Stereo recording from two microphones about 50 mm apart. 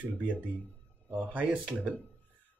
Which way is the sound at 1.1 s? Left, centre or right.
Right.